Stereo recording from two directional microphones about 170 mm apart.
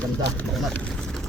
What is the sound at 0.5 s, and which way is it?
Speech, centre (ahead or behind).